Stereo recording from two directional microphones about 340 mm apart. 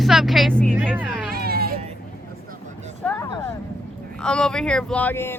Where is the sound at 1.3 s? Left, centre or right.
Right.